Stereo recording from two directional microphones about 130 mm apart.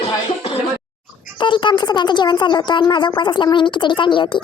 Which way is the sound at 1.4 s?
40° left (ahead or behind).